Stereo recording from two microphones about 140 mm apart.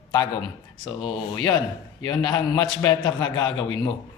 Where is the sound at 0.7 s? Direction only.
35° left (ahead or behind).